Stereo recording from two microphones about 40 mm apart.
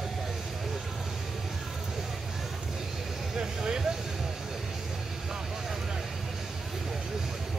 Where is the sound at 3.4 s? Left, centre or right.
Centre.